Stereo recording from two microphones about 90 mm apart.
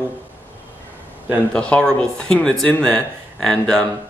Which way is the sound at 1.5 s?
15° left (ahead or behind).